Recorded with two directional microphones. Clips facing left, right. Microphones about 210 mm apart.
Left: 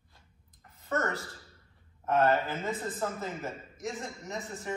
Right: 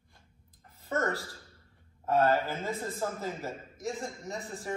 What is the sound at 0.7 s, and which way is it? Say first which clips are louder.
A man's voice: right 1 dB; 30° right (ahead or behind).